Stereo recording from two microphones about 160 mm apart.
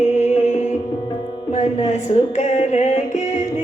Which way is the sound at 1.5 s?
45° left (ahead or behind).